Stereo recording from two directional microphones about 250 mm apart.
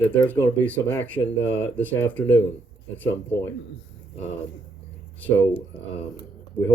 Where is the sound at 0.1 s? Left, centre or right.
Centre.